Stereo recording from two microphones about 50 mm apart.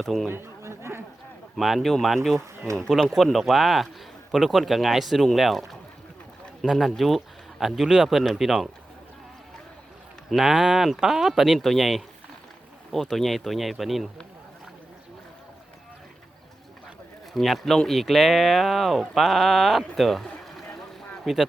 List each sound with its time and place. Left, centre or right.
0.0 s speech: centre
0.3 s chatter: right
1.5 s speech: centre
10.2 s speech: centre
17.3 s speech: centre
20.4 s a sound: centre
21.3 s speech: centre